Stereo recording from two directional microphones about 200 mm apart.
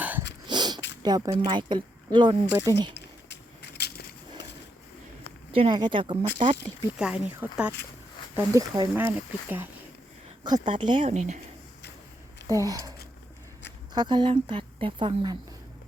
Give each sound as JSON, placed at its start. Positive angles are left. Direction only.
{"t": 0.0, "sound": "a sound", "side_deg": -10}
{"t": 0.4, "sound": "a sound", "side_deg": -20}
{"t": 1.0, "sound": "speech", "side_deg": -20}
{"t": 3.8, "sound": "a sound", "side_deg": 55}
{"t": 5.5, "sound": "speech", "side_deg": -25}
{"t": 6.9, "sound": "speech", "side_deg": -5}
{"t": 10.4, "sound": "speech", "side_deg": -20}
{"t": 12.5, "sound": "speech", "side_deg": -15}
{"t": 13.9, "sound": "speech", "side_deg": -20}